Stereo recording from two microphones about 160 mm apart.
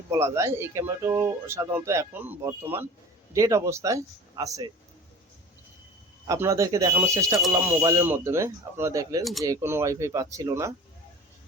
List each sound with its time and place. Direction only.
0.1 s speech: 20° right (ahead or behind)
6.2 s speech: 20° right (ahead or behind)